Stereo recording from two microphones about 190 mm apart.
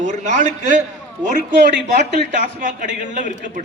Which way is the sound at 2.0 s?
45° right (ahead or behind).